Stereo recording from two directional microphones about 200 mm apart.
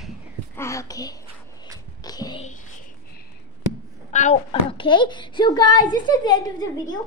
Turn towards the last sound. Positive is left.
turn(degrees=20)  # may be behind; listen again after turning